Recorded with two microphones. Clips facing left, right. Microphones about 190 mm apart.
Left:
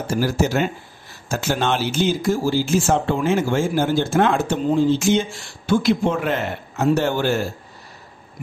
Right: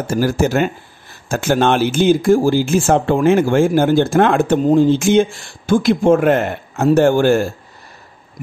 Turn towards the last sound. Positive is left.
turn(degrees=-50)  # may be behind; listen again after turning